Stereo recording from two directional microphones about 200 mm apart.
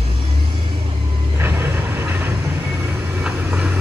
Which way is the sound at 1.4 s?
10° right (ahead or behind).